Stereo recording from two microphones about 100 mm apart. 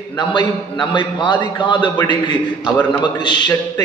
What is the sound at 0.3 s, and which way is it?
A man's voice, 50° left (ahead or behind).